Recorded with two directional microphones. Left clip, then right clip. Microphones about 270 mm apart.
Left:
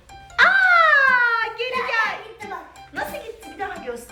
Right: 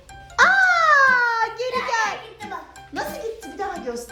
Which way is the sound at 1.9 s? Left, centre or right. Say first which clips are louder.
Left 1 dB; centre.